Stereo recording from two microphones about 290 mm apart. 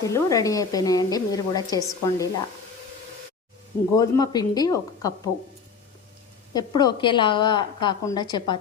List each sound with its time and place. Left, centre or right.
0.0 s a woman's voice: centre
3.9 s a woman's voice: centre
6.5 s a woman's voice: centre